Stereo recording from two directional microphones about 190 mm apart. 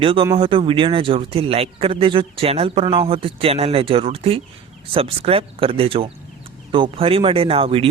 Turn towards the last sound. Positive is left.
turn(degrees=-30)  # may be behind; listen again after turning